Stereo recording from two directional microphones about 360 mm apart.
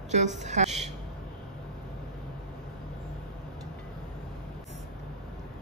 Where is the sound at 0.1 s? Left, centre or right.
Centre.